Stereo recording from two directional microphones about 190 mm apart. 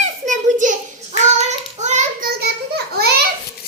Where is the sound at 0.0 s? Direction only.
40° right (ahead or behind).